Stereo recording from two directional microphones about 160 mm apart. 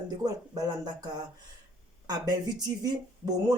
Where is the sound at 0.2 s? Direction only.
25° right (ahead or behind).